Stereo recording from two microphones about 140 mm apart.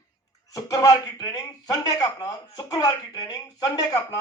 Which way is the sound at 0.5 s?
25° left (ahead or behind).